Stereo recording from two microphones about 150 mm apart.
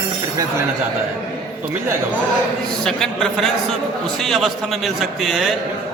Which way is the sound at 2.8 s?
5° left (ahead or behind).